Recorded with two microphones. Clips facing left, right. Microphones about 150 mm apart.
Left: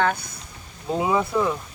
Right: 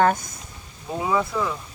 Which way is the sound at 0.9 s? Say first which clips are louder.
Left 2 dB; 20° left (ahead or behind).